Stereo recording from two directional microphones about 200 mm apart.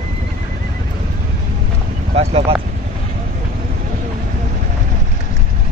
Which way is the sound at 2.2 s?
30° right (ahead or behind).